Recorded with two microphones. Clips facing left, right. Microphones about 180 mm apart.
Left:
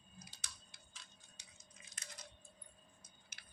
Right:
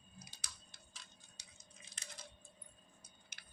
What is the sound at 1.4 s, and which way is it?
Squish, 30° right (ahead or behind).